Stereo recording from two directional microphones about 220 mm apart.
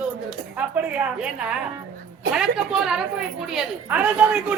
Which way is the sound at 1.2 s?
5° right (ahead or behind).